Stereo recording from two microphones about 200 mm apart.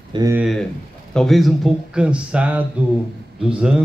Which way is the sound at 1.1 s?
Centre (ahead or behind).